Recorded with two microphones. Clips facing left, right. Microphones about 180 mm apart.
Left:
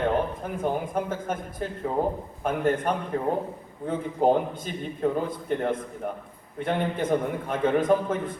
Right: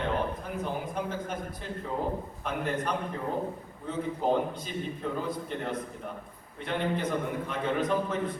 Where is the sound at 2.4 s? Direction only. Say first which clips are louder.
Left 9 dB; 50° left (ahead or behind).